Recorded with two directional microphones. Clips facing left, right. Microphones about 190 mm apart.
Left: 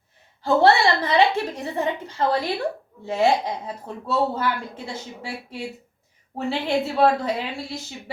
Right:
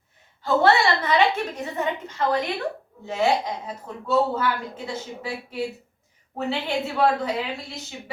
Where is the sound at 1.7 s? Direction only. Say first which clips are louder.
Left 2 dB; 35° left (ahead or behind).